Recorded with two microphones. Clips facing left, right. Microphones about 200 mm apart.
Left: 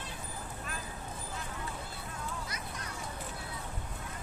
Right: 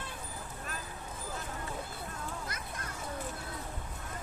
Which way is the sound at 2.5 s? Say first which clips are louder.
Even; 50° right (ahead or behind).